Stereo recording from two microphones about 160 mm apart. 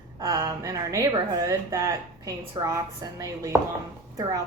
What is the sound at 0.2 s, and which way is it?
A woman's voice, 20° right (ahead or behind).